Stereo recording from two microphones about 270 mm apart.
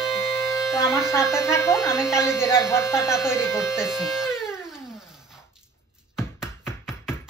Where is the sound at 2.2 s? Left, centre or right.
Centre.